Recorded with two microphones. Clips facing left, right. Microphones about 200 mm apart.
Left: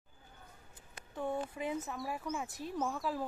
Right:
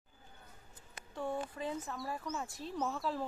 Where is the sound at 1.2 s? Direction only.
20° left (ahead or behind).